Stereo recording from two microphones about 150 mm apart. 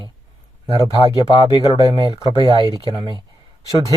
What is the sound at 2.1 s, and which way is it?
Speech, 35° right (ahead or behind).